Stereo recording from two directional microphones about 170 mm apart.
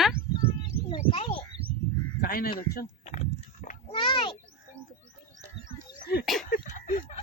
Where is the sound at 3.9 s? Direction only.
30° left (ahead or behind).